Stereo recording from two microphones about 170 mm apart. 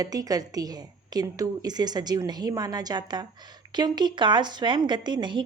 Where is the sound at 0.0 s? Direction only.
20° right (ahead or behind).